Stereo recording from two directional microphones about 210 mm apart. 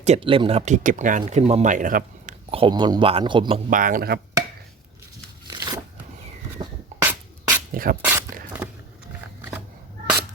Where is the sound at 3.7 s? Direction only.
40° right (ahead or behind).